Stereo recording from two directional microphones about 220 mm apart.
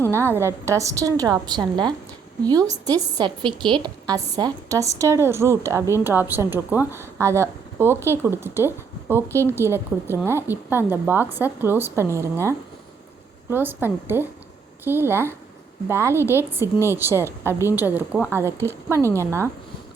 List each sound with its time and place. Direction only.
0.1 s a woman's voice: 10° right (ahead or behind)